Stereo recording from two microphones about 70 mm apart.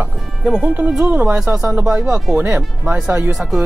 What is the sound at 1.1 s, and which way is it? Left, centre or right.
Speech, right.